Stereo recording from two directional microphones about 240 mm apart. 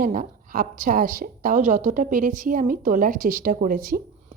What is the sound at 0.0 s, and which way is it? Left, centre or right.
Speech, right.